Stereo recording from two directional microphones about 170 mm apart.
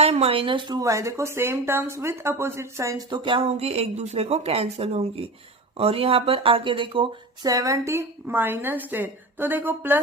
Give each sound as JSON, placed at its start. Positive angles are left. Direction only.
{"t": 0.0, "sound": "speech", "side_deg": -35}